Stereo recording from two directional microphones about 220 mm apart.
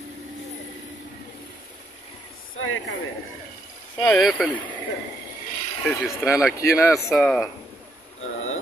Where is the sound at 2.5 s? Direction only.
65° left (ahead or behind).